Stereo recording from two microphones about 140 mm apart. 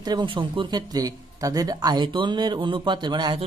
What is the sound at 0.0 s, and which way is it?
Speech, 30° right (ahead or behind).